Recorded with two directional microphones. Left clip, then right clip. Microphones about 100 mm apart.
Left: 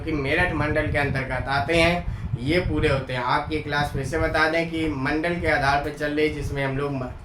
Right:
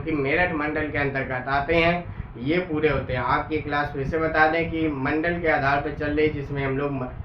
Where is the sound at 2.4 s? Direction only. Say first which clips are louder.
Even; 20° left (ahead or behind).